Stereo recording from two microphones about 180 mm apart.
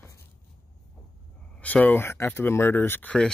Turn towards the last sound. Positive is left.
turn(degrees=10)  # may be behind; listen again after turning